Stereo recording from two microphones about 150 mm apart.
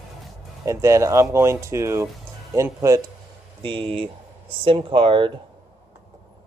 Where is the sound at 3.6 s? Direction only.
35° right (ahead or behind).